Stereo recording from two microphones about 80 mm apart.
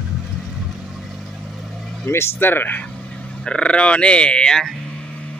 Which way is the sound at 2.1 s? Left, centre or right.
Left.